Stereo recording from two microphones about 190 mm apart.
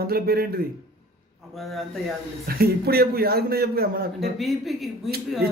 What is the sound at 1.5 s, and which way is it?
Speech, centre (ahead or behind).